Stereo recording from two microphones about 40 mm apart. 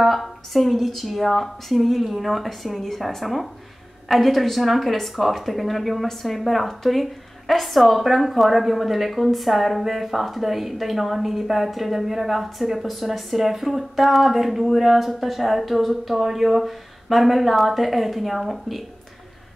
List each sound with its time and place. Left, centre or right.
0.0 s speech: centre